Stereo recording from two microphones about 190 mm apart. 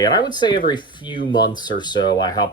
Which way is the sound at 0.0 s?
20° left (ahead or behind).